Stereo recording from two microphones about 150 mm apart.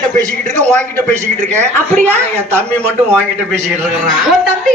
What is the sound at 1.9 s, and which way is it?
Speech, 10° left (ahead or behind).